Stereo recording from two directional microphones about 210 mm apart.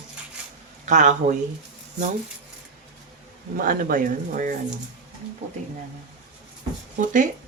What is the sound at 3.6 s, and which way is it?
Speech, 40° right (ahead or behind).